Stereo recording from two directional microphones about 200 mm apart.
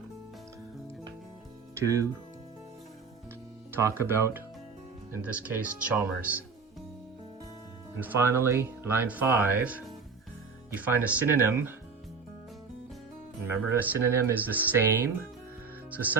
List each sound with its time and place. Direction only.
1.7 s speech: 15° right (ahead or behind)
3.7 s speech: 10° right (ahead or behind)
7.9 s speech: 10° right (ahead or behind)
13.4 s speech: 10° right (ahead or behind)